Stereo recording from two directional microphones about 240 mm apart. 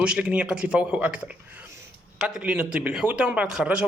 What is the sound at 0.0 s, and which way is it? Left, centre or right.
Speech, centre.